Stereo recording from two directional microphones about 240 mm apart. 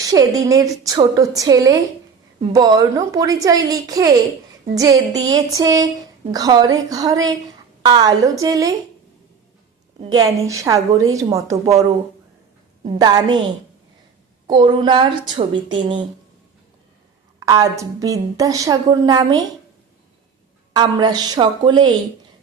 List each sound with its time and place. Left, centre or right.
0.0 s a woman's voice: centre
10.0 s a woman's voice: centre
12.8 s a woman's voice: centre
14.4 s a woman's voice: centre
17.4 s a woman's voice: centre
20.7 s a woman's voice: centre